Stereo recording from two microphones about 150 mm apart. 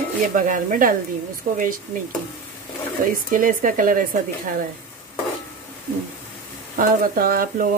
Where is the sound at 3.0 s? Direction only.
65° right (ahead or behind).